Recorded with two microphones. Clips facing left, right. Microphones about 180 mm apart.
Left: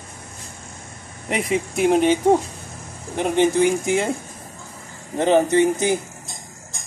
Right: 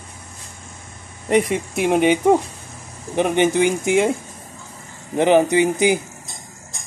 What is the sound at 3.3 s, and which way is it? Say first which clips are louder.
Speech: left 1 dB; 75° right (ahead or behind).